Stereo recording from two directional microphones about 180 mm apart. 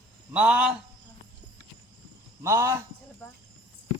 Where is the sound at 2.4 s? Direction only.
15° right (ahead or behind).